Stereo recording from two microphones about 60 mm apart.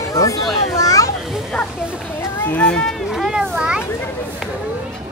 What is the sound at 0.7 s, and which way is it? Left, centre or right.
Children playing, left.